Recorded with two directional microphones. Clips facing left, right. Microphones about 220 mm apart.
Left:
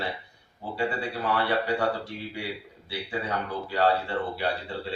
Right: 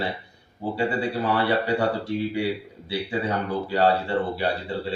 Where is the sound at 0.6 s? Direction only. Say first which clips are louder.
Right 5 dB; 30° right (ahead or behind).